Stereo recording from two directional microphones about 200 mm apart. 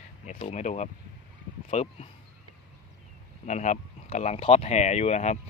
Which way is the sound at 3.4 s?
35° left (ahead or behind).